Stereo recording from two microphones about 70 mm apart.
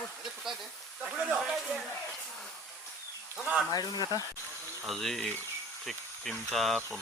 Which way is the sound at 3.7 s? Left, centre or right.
Left.